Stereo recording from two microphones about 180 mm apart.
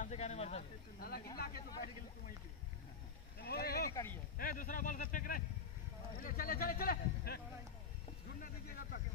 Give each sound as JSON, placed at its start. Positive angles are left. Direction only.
{"t": 0.0, "sound": "speech", "side_deg": 40}
{"t": 0.9, "sound": "speech", "side_deg": 60}
{"t": 3.4, "sound": "speech", "side_deg": 60}
{"t": 3.9, "sound": "speech", "side_deg": 15}
{"t": 4.4, "sound": "a man's voice", "side_deg": 50}
{"t": 8.4, "sound": "speech", "side_deg": 55}